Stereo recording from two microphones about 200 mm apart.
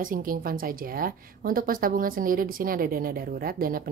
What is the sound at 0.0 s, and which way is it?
A woman's voice, 45° right (ahead or behind).